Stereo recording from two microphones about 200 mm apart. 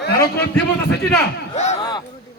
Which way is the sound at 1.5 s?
35° left (ahead or behind).